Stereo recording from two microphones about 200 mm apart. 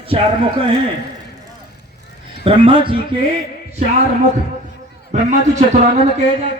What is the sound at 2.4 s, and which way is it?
Speech, 25° right (ahead or behind).